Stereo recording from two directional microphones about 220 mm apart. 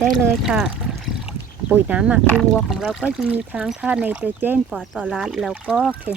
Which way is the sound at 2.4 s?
Centre (ahead or behind).